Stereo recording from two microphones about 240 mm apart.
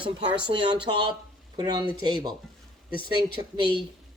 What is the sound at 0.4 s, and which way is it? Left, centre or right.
Speech, centre.